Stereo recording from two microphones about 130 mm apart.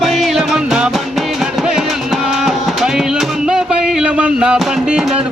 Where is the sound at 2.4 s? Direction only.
5° right (ahead or behind).